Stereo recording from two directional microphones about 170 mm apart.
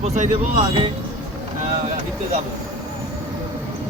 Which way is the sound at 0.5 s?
30° right (ahead or behind).